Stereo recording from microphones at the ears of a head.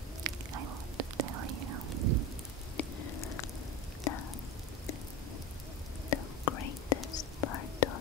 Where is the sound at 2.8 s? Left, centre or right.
Left.